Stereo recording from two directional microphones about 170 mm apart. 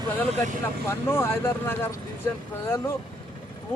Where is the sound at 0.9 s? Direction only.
15° left (ahead or behind).